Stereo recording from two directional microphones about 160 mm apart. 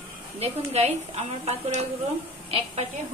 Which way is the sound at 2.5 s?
35° right (ahead or behind).